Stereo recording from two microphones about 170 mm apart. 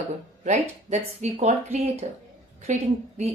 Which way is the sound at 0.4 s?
45° right (ahead or behind).